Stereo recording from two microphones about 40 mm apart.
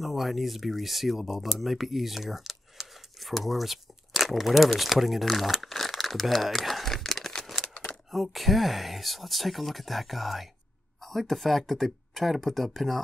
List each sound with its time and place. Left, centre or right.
0.0 s speech: centre
7.6 s a sound: left
8.1 s speech: centre